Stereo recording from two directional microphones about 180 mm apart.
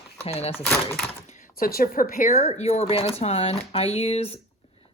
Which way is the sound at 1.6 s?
55° left (ahead or behind).